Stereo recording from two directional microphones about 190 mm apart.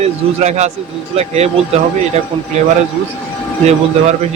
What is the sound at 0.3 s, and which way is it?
A man's voice, 35° right (ahead or behind).